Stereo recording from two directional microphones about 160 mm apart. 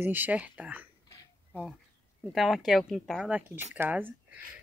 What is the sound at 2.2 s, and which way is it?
Speech, centre (ahead or behind).